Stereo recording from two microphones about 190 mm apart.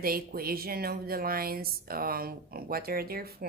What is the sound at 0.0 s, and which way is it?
Speech, 50° right (ahead or behind).